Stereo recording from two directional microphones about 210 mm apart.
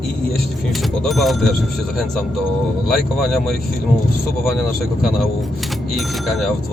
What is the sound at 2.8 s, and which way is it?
Speech, centre (ahead or behind).